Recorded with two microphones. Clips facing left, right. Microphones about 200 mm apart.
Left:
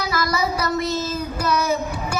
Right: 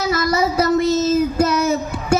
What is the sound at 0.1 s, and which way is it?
Child singing, 25° right (ahead or behind).